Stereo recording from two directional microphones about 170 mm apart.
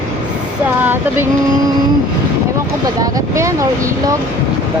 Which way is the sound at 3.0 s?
20° right (ahead or behind).